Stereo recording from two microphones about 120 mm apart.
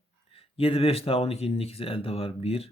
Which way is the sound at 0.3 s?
50° left (ahead or behind).